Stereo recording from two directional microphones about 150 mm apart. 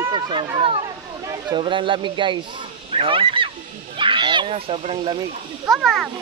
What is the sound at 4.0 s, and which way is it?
Children playing, 30° right (ahead or behind).